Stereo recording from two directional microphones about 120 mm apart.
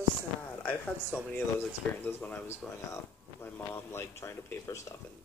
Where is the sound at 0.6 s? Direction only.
15° left (ahead or behind).